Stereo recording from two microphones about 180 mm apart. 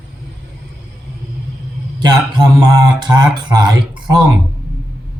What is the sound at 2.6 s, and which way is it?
Speech, 20° right (ahead or behind).